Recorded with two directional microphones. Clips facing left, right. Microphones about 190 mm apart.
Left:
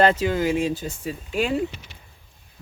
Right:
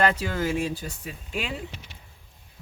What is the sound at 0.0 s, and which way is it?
Speech, 25° left (ahead or behind).